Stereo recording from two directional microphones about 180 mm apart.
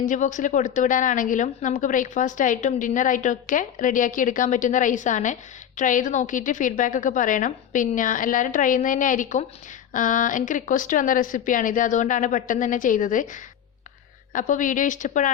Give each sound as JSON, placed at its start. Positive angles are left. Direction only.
{"t": 0.0, "sound": "a woman's voice", "side_deg": 45}